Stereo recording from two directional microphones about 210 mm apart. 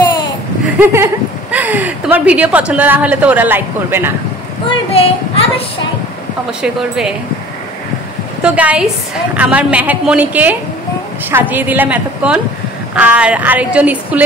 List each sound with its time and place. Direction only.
0.7 s speech: 10° right (ahead or behind)
4.6 s speech: 25° left (ahead or behind)
6.6 s speech: 5° right (ahead or behind)
8.4 s a woman's voice: 5° right (ahead or behind)